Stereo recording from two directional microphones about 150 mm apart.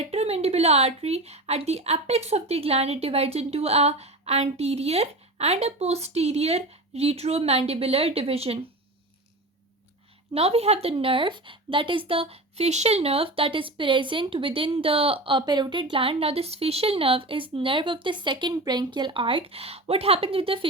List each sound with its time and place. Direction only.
0.0 s speech: 45° right (ahead or behind)
10.3 s a woman's voice: 45° right (ahead or behind)